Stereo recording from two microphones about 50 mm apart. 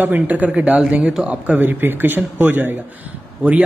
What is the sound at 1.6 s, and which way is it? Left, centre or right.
Speech, right.